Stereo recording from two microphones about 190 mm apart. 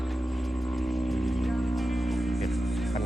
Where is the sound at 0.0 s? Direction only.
Centre (ahead or behind).